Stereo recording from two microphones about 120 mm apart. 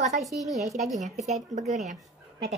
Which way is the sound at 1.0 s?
75° right (ahead or behind).